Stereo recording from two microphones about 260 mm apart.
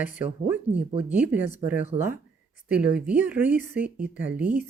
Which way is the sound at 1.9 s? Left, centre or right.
Right.